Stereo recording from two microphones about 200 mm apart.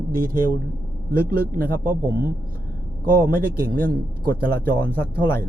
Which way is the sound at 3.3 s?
50° right (ahead or behind).